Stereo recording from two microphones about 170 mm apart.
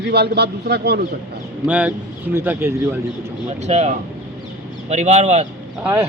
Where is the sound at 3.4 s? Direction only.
40° right (ahead or behind).